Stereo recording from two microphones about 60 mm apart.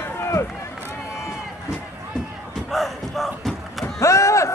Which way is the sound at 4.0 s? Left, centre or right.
Left.